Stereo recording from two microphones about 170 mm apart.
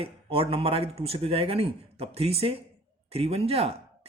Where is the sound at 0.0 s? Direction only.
35° right (ahead or behind).